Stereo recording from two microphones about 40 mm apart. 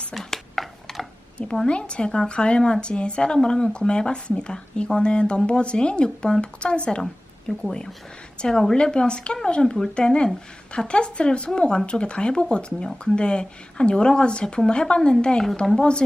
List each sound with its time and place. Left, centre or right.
0.1 s a sound: centre
1.6 s speech: left
7.0 s speech: centre